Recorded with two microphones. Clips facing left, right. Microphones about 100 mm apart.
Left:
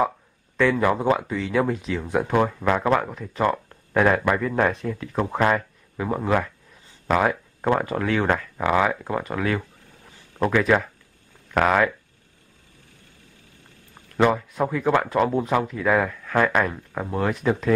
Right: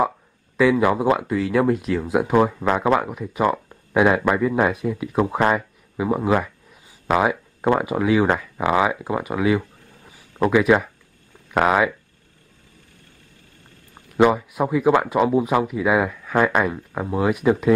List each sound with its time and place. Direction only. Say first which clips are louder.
0.6 s speech: right 3 dB; 5° right (ahead or behind)
14.1 s speech: right 3 dB; 10° right (ahead or behind)